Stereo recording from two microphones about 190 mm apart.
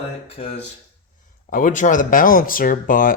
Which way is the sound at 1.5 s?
45° left (ahead or behind).